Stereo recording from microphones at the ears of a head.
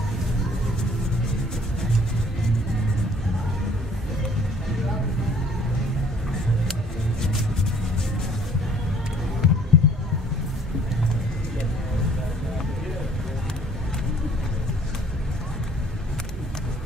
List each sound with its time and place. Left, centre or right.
9.4 s music: left